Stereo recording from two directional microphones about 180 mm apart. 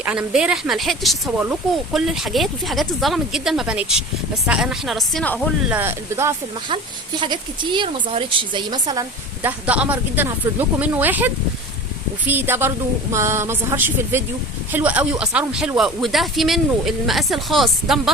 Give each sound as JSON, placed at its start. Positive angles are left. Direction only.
{"t": 0.0, "sound": "speech", "side_deg": -5}
{"t": 5.6, "sound": "speech", "side_deg": -10}
{"t": 7.2, "sound": "a woman's voice", "side_deg": -25}